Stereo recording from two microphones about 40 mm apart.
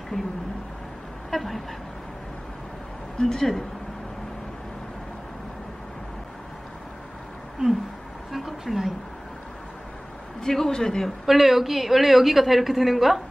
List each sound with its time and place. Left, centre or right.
0.1 s a man's voice: centre
1.3 s speech: centre
3.2 s a man's voice: centre
8.3 s a sound: centre
10.4 s a man's voice: centre
11.2 s a woman's voice: centre